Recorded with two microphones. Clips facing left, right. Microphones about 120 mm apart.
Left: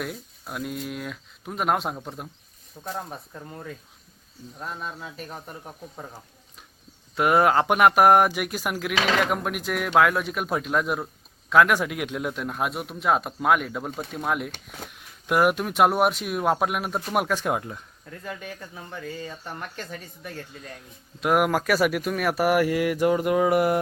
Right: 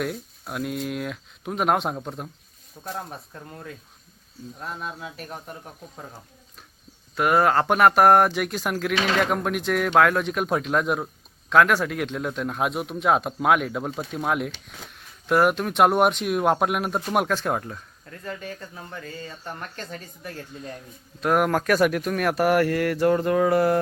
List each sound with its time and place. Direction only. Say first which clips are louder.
0.0 s speech: right 4 dB; centre (ahead or behind)
7.2 s speech: even; 20° left (ahead or behind); by 14.5 s centre (ahead or behind)
14.9 s speech: right 2 dB; 10° left (ahead or behind)
17.3 s speech: even; 10° left (ahead or behind)